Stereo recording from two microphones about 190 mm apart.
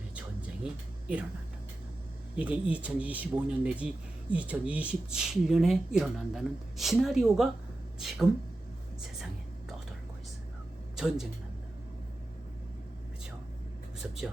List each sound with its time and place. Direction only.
0.2 s a sound: 5° right (ahead or behind)
2.3 s speech: 5° right (ahead or behind)
10.9 s speech: centre (ahead or behind)